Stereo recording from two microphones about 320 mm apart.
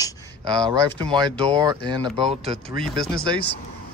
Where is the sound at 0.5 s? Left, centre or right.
Centre.